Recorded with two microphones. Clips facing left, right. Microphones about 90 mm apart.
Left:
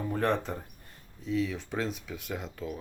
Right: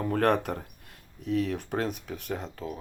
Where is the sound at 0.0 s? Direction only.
75° right (ahead or behind).